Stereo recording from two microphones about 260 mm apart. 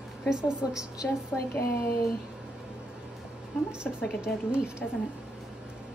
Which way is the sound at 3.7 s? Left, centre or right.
Centre.